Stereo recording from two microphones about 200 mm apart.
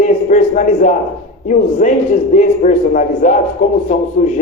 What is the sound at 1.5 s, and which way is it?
A man's voice, 40° left (ahead or behind).